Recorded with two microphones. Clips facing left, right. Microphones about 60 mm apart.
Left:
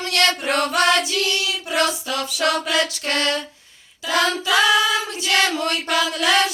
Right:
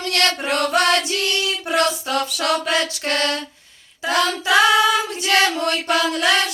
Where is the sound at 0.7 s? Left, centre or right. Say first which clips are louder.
Right 1 dB; right.